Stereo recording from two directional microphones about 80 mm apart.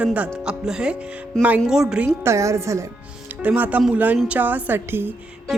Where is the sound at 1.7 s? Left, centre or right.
Centre.